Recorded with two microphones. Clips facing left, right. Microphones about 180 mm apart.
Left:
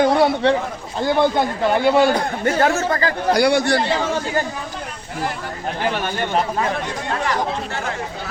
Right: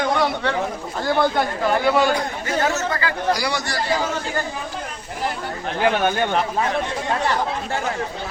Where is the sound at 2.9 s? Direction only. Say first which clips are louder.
Left 4 dB; 40° left (ahead or behind).